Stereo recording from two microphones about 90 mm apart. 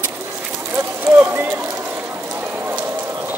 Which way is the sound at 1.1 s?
25° right (ahead or behind).